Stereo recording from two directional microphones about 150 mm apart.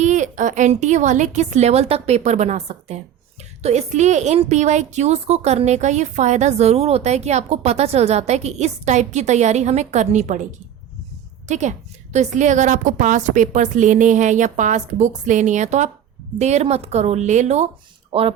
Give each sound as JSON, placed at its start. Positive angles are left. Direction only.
{"t": 0.0, "sound": "a woman's voice", "side_deg": -55}
{"t": 11.4, "sound": "a woman's voice", "side_deg": -50}